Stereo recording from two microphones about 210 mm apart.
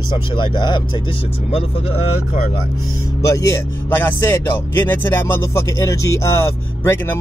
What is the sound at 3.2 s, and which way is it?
Speech, 15° left (ahead or behind).